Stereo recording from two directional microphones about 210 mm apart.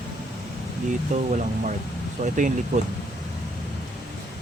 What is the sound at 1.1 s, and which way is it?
Speech, 35° right (ahead or behind).